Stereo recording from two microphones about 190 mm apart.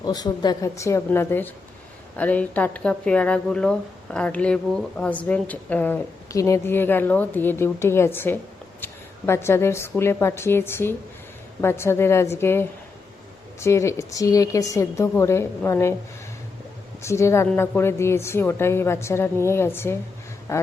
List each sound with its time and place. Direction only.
0.0 s a woman's voice: 20° left (ahead or behind)
17.0 s a woman's voice: 15° left (ahead or behind)